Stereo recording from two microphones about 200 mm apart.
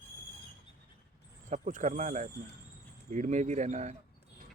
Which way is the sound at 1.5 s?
40° right (ahead or behind).